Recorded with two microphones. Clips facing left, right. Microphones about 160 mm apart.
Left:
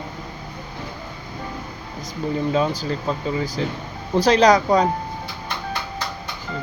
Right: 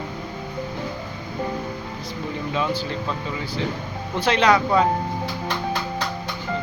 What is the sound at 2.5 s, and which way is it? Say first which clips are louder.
Speech: left 1 dB; 40° left (ahead or behind).